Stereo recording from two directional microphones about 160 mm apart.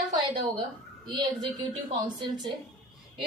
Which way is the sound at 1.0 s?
30° right (ahead or behind).